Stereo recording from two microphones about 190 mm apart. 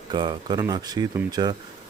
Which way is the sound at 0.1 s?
25° right (ahead or behind).